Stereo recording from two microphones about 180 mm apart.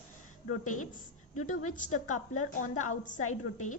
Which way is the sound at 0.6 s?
45° left (ahead or behind).